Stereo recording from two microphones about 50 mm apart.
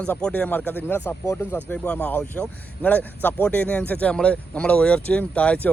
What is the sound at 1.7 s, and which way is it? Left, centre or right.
A man's voice, left.